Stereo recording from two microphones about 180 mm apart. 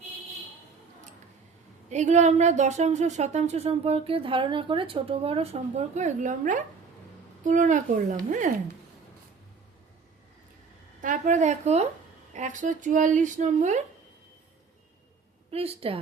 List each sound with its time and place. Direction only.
1.9 s speech: 40° right (ahead or behind)
11.0 s speech: 45° right (ahead or behind)
15.5 s speech: 35° right (ahead or behind)